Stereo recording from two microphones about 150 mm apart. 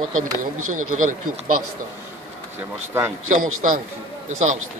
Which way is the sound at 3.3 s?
60° right (ahead or behind).